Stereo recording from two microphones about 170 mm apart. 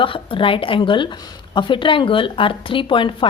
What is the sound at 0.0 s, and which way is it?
A woman's voice, 30° left (ahead or behind).